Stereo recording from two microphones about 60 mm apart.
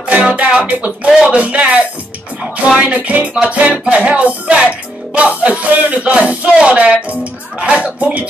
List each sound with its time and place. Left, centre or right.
0.0 s music: centre
1.3 s speech: right
2.7 s speech: right